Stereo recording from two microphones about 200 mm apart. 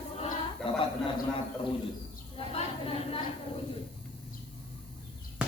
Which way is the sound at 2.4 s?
30° left (ahead or behind).